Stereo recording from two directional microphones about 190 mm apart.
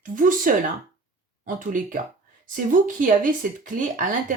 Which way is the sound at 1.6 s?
45° right (ahead or behind).